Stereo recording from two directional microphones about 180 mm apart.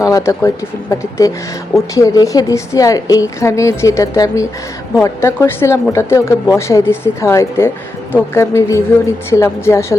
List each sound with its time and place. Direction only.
0.0 s a woman's voice: 15° left (ahead or behind)